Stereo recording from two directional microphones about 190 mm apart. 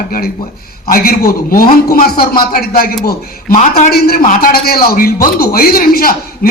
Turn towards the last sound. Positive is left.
turn(degrees=50)  # may be behind; listen again after turning